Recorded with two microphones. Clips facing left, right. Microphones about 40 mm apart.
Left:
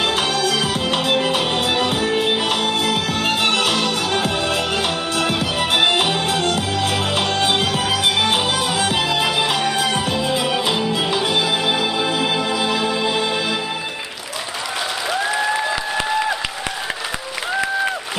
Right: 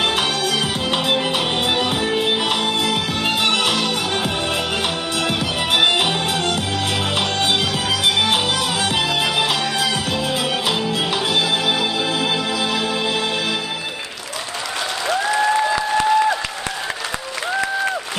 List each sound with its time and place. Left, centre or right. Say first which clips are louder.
0.2 s music: left 1 dB; right
7.5 s music: left 1 dB; centre
9.6 s music: left 1 dB; left
10.4 s music: left 1 dB; centre
12.0 s music: left 1 dB; centre
15.0 s applause: right 3 dB; centre
17.6 s applause: left 1 dB; centre